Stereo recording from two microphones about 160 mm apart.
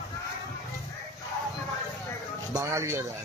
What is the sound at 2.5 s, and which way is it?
Speech, 20° right (ahead or behind).